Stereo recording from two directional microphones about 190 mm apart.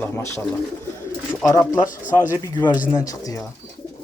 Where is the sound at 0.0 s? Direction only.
15° left (ahead or behind).